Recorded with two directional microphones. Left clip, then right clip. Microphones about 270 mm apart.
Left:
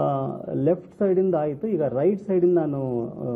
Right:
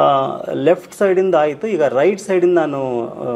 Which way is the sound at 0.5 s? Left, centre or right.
Centre.